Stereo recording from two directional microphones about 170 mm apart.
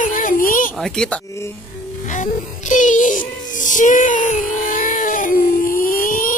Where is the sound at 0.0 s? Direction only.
50° left (ahead or behind).